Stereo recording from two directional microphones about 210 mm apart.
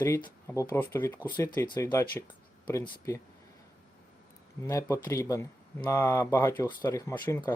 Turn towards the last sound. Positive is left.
turn(degrees=15)  # may be behind; listen again after turning